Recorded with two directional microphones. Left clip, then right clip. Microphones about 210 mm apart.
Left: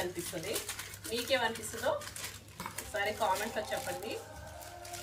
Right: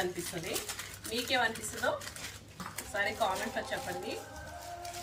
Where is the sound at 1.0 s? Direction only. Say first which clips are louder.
Right 1 dB; centre (ahead or behind).